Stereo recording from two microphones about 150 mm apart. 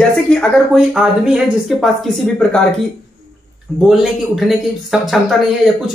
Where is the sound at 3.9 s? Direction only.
Centre (ahead or behind).